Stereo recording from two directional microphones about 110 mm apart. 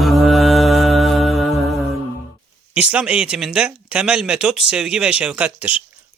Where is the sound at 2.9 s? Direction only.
10° right (ahead or behind).